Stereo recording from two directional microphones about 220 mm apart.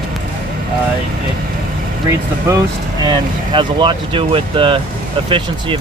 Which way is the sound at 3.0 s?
20° right (ahead or behind).